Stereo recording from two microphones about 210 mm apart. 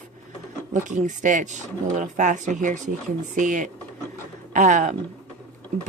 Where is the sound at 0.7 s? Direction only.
35° right (ahead or behind).